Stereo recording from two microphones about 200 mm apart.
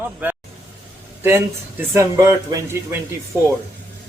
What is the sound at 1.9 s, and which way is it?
A man's voice, 15° right (ahead or behind).